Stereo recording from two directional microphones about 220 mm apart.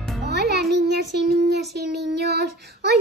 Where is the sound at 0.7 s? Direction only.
50° right (ahead or behind).